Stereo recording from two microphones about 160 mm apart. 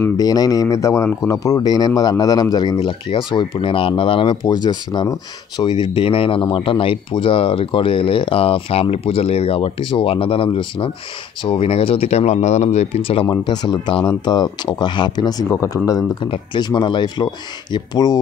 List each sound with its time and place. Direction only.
0.2 s speech: 25° left (ahead or behind)